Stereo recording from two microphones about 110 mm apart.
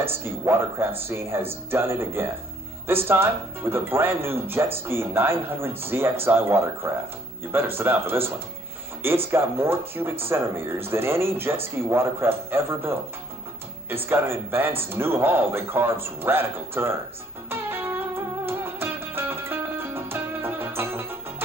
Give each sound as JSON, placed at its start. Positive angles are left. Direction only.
{"t": 0.0, "sound": "speech", "side_deg": -20}
{"t": 9.3, "sound": "speech", "side_deg": -20}
{"t": 14.0, "sound": "speech", "side_deg": -20}
{"t": 17.5, "sound": "music", "side_deg": -20}